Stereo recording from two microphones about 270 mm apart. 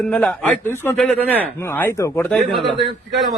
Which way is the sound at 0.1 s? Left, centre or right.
Centre.